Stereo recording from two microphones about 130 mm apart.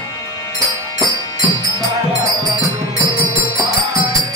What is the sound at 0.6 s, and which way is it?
Music, 25° right (ahead or behind).